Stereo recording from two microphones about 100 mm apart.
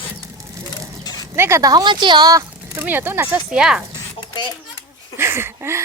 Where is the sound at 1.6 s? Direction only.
40° right (ahead or behind).